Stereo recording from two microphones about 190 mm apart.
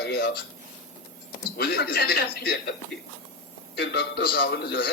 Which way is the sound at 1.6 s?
55° left (ahead or behind).